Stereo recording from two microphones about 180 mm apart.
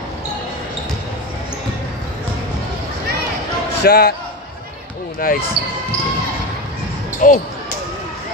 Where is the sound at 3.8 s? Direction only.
60° left (ahead or behind).